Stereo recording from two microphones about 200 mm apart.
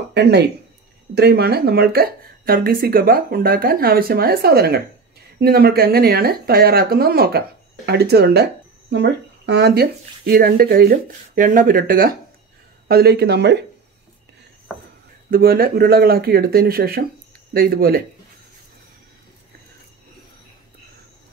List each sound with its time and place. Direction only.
0.1 s speech: 55° right (ahead or behind)
14.7 s a sound: 5° left (ahead or behind)
15.3 s speech: 45° right (ahead or behind)